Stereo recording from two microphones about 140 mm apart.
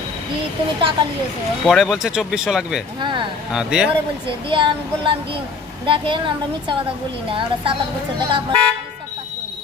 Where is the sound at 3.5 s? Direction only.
5° right (ahead or behind).